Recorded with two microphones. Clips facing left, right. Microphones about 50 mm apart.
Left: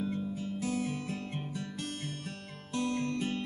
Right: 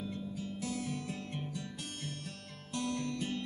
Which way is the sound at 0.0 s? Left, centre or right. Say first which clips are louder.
Left 5 dB; left.